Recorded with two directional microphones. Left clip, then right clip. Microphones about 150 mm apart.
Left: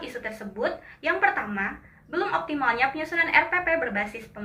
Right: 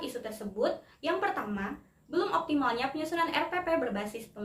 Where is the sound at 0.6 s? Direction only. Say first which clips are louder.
Left 1 dB; 45° right (ahead or behind).